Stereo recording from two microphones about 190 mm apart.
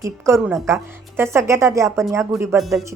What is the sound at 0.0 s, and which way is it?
Speech, 15° right (ahead or behind).